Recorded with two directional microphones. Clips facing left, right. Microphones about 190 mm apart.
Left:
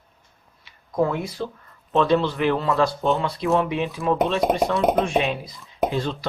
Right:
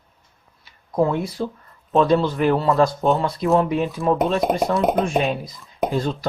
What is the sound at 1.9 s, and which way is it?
A man's voice, 40° right (ahead or behind).